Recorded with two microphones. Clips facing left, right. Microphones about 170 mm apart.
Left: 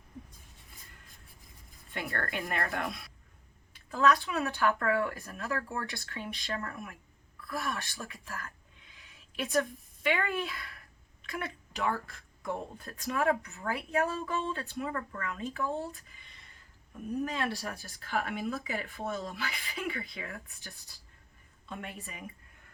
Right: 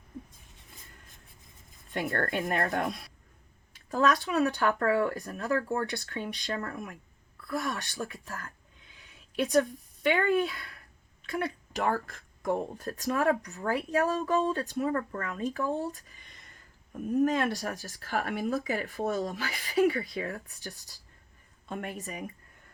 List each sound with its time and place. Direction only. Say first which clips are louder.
1.9 s a woman's voice: right 6 dB; 40° right (ahead or behind)